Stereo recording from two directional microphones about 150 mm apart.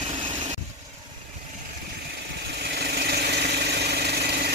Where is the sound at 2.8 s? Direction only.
90° right.